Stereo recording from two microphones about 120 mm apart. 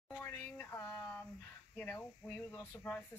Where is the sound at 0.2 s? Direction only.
20° left (ahead or behind).